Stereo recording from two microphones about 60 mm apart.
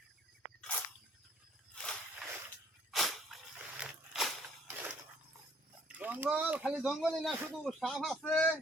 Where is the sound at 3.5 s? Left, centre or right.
Centre.